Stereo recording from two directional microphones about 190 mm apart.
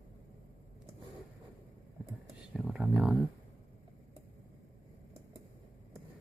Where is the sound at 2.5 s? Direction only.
5° right (ahead or behind).